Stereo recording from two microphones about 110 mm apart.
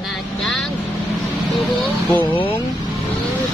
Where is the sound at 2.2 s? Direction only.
50° left (ahead or behind).